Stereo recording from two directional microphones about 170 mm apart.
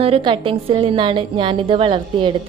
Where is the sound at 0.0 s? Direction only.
30° right (ahead or behind).